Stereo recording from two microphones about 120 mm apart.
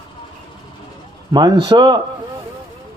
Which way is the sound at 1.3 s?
40° right (ahead or behind).